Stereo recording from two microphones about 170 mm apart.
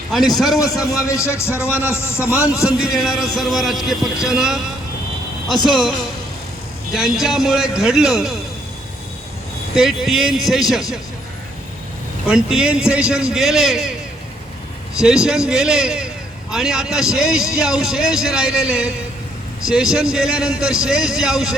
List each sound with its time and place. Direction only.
0.1 s a man's voice: centre (ahead or behind)
1.0 s speech: 20° left (ahead or behind)
2.6 s a man's voice: 5° right (ahead or behind)
5.6 s a man's voice: centre (ahead or behind)
6.9 s a man's voice: centre (ahead or behind)
9.7 s a man's voice: centre (ahead or behind)
12.3 s a man's voice: 5° right (ahead or behind)
14.9 s a man's voice: 5° right (ahead or behind)